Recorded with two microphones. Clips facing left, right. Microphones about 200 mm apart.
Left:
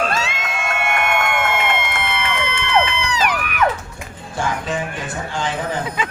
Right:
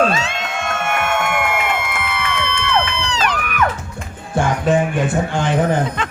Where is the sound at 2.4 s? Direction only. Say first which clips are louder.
Left 1 dB; 15° left (ahead or behind).